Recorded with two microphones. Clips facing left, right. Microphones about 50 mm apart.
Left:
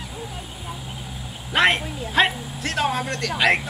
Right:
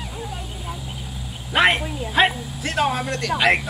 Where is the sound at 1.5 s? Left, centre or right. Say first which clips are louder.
Right 1 dB; centre.